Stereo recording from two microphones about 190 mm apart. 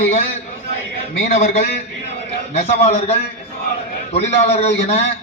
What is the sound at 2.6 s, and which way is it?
A man's voice, 35° left (ahead or behind).